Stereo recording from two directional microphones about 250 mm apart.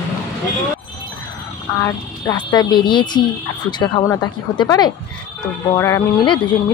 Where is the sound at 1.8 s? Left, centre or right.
Centre.